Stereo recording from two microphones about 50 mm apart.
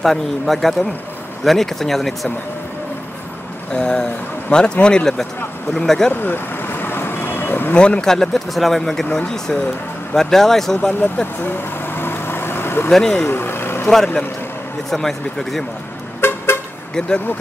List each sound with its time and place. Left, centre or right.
0.0 s a man's voice: centre
3.7 s speech: centre
6.2 s vehicle: left
7.7 s speech: centre
11.4 s vehicle: left
12.9 s speech: centre
13.3 s vehicle: left
13.8 s a man's voice: centre
16.2 s vehicle: left